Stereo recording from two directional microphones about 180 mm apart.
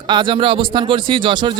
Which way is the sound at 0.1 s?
25° right (ahead or behind).